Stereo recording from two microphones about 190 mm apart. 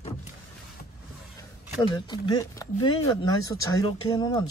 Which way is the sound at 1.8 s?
20° left (ahead or behind).